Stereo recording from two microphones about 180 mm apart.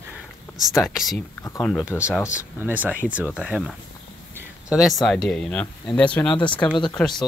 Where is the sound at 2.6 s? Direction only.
10° right (ahead or behind).